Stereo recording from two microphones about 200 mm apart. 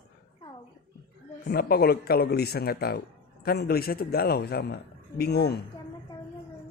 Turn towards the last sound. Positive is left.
turn(degrees=55)  # may be behind; listen again after turning